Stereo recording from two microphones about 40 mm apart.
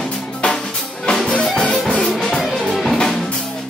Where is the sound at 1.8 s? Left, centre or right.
Centre.